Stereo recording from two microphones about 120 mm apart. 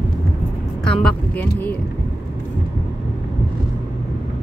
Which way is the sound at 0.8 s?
5° left (ahead or behind).